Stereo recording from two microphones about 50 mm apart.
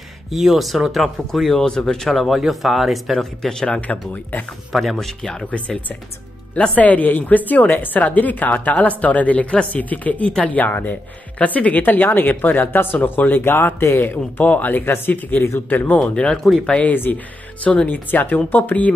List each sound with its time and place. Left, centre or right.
0.3 s speech: centre
3.4 s speech: centre
4.1 s speech: left
4.7 s speech: centre
5.5 s speech: left
13.5 s speech: left
13.9 s speech: left
16.9 s speech: left